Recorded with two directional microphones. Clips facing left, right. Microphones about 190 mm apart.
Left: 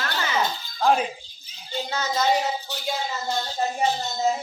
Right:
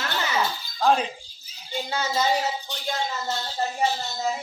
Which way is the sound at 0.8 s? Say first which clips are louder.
Even; 5° left (ahead or behind).